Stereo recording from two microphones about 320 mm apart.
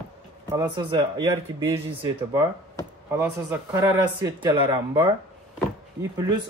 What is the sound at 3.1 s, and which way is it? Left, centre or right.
Speech, centre.